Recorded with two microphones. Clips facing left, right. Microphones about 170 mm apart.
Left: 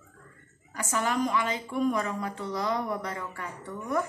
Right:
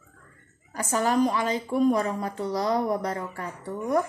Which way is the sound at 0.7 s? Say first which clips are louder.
Right 5 dB; 35° right (ahead or behind).